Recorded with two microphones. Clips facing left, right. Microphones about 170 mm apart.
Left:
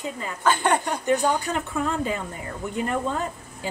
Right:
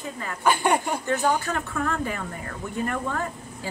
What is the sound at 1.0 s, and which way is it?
A woman's voice, 15° left (ahead or behind).